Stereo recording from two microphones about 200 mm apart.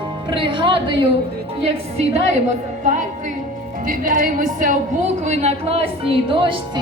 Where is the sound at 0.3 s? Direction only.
25° right (ahead or behind).